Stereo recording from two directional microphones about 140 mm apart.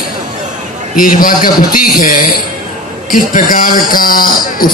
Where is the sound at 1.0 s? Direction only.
85° left.